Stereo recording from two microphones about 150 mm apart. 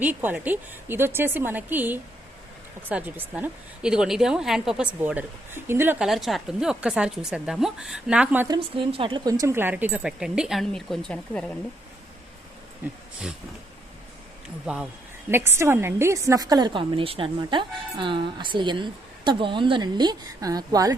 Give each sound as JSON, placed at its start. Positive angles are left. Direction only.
{"t": 0.0, "sound": "a woman's voice", "side_deg": -10}
{"t": 6.1, "sound": "a woman's voice", "side_deg": 0}
{"t": 8.5, "sound": "a woman's voice", "side_deg": -40}
{"t": 12.8, "sound": "a woman's voice", "side_deg": -10}
{"t": 14.7, "sound": "a woman's voice", "side_deg": -5}